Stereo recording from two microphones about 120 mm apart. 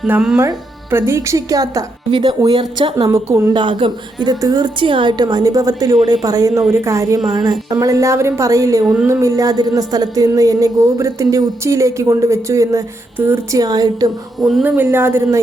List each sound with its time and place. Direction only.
0.3 s a woman's voice: 20° right (ahead or behind)
2.0 s a woman's voice: 40° right (ahead or behind)
3.1 s a woman's voice: 25° right (ahead or behind)
3.5 s a woman's voice: 45° right (ahead or behind)
14.3 s speech: centre (ahead or behind)
14.6 s a woman's voice: 15° right (ahead or behind)